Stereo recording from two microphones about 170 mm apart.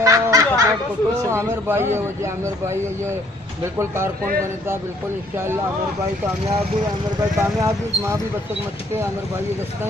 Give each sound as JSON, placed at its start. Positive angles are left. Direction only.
{"t": 0.0, "sound": "snicker", "side_deg": -20}
{"t": 1.3, "sound": "speech", "side_deg": -15}
{"t": 6.4, "sound": "speech", "side_deg": -25}